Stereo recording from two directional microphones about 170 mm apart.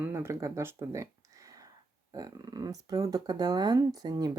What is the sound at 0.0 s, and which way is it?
Speech, 15° right (ahead or behind).